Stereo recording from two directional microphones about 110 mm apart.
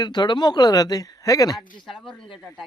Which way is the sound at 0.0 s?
40° left (ahead or behind).